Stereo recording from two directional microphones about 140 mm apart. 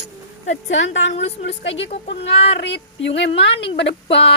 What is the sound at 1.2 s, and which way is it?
A woman's voice, 50° left (ahead or behind).